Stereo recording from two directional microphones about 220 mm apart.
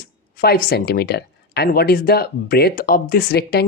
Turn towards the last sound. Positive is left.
turn(degrees=45)  # may be behind; listen again after turning